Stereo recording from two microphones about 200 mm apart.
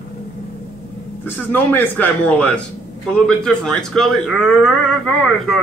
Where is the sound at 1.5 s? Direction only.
10° left (ahead or behind).